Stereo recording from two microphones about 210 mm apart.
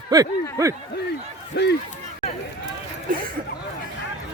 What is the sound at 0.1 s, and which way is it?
Speech, 15° right (ahead or behind).